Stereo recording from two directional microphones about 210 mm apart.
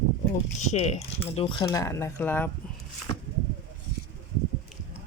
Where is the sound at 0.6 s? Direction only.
30° left (ahead or behind).